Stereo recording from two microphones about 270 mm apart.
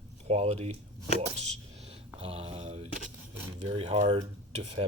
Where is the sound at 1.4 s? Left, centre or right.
Right.